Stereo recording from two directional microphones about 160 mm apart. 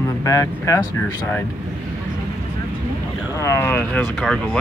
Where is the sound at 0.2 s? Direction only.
20° left (ahead or behind).